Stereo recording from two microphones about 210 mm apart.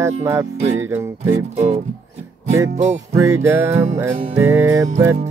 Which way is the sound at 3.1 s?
15° right (ahead or behind).